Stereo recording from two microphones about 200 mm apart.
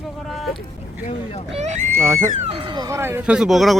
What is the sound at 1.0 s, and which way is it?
Speech, 35° left (ahead or behind).